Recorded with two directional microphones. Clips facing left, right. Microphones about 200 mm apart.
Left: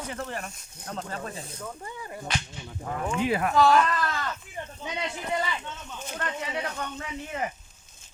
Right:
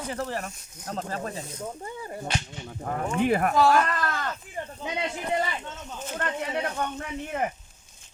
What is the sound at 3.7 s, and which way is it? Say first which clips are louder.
Sheep: left 1 dB; 50° right (ahead or behind).